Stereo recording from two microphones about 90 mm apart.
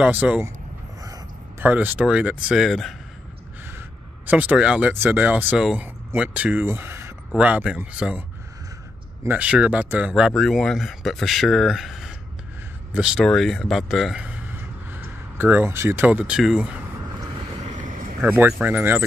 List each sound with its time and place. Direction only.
0.0 s speech: 15° right (ahead or behind)
1.6 s speech: 20° right (ahead or behind); by 3.0 s centre (ahead or behind)
4.3 s speech: 15° right (ahead or behind)
6.6 s speech: 25° right (ahead or behind)
7.3 s speech: 15° right (ahead or behind)
9.3 s speech: 10° right (ahead or behind)
10.3 s speech: 5° left (ahead or behind)
13.2 s speech: 5° left (ahead or behind)
14.9 s a sound: 25° right (ahead or behind)
16.1 s speech: 15° right (ahead or behind)
18.2 s speech: 15° right (ahead or behind)